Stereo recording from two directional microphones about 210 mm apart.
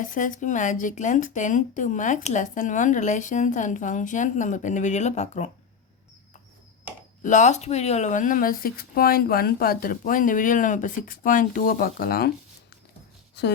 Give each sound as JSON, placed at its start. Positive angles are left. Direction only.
{"t": 0.0, "sound": "speech", "side_deg": 40}
{"t": 7.2, "sound": "speech", "side_deg": 35}
{"t": 13.4, "sound": "speech", "side_deg": 55}